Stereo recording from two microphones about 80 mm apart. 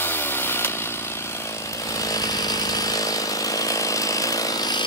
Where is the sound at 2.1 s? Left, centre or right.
Left.